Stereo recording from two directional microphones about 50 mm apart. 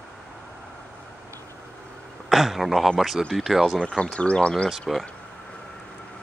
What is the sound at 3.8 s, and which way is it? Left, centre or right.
Speech, centre.